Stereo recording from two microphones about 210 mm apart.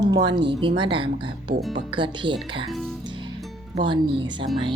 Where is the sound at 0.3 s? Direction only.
25° right (ahead or behind).